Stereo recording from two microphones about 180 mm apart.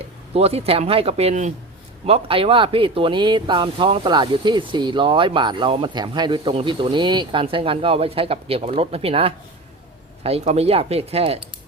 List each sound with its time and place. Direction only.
0.3 s speech: 35° right (ahead or behind)